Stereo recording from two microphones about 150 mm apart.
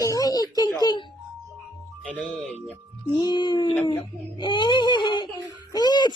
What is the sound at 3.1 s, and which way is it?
Speech, 30° left (ahead or behind).